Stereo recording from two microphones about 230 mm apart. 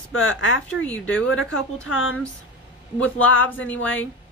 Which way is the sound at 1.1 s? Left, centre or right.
Left.